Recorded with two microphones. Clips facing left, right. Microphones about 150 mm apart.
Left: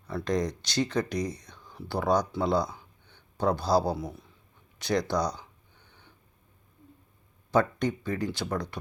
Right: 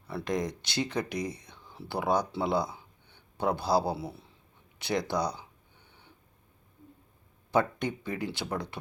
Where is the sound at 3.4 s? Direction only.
15° right (ahead or behind).